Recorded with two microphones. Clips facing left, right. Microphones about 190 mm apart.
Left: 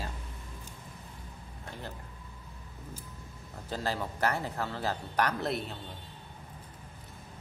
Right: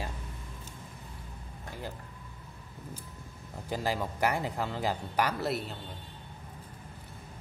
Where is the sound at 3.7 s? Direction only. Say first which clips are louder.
Right 2 dB; 10° right (ahead or behind).